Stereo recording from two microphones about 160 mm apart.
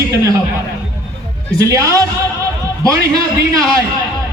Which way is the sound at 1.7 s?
20° right (ahead or behind).